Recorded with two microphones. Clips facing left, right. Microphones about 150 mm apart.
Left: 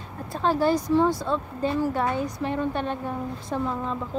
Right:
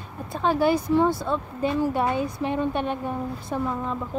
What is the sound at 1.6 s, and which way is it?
A woman's voice, 15° right (ahead or behind).